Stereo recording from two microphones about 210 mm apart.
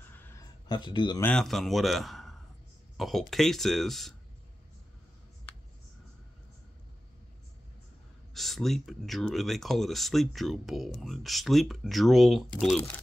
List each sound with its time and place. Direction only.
0.0 s a sound: 10° left (ahead or behind)
1.2 s speech: centre (ahead or behind)
8.4 s speech: centre (ahead or behind)